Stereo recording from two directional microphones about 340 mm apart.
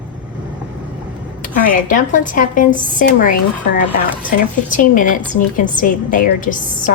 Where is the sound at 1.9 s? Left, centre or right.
Left.